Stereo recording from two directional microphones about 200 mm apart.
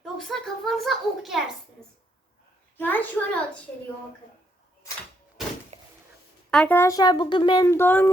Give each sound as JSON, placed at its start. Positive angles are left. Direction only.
{"t": 0.0, "sound": "a child's voice", "side_deg": 0}
{"t": 2.7, "sound": "speech", "side_deg": 10}
{"t": 5.7, "sound": "a sound", "side_deg": -35}
{"t": 6.5, "sound": "speech", "side_deg": 5}